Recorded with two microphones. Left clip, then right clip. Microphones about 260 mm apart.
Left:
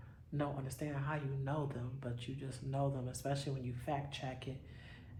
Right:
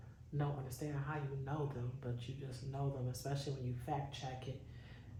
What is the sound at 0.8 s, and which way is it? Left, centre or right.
Speech, left.